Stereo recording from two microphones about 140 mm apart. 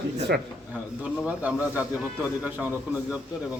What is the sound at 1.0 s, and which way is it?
Speech, 10° right (ahead or behind).